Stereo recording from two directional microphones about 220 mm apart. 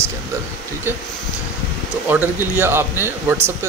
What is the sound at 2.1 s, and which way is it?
Speech, 10° right (ahead or behind).